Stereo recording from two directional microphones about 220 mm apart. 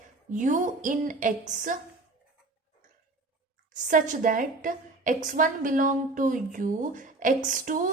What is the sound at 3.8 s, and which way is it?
A woman's voice, 35° right (ahead or behind).